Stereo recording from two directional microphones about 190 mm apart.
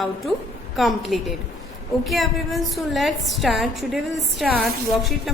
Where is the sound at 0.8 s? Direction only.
Centre (ahead or behind).